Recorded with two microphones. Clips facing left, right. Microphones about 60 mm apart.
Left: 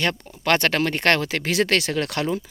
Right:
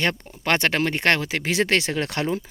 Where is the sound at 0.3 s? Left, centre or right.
Centre.